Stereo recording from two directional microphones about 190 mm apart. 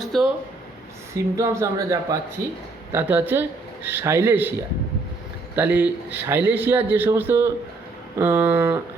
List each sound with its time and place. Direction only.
0.0 s a sound: centre (ahead or behind)
1.1 s a man's voice: 15° right (ahead or behind)
5.5 s a man's voice: 10° right (ahead or behind)